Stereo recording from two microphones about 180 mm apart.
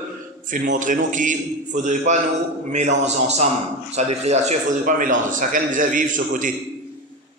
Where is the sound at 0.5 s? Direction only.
45° right (ahead or behind).